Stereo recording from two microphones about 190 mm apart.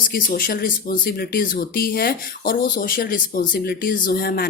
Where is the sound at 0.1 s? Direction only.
50° left (ahead or behind).